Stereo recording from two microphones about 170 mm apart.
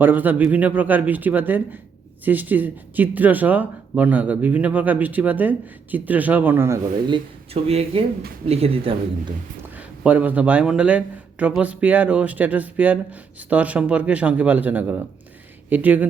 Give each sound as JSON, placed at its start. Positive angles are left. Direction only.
{"t": 0.0, "sound": "a man's voice", "side_deg": -10}
{"t": 7.1, "sound": "speech", "side_deg": -35}
{"t": 9.7, "sound": "a man's voice", "side_deg": -10}